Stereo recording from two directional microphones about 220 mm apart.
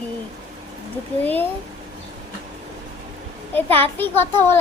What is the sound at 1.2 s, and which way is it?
Speech, 10° left (ahead or behind).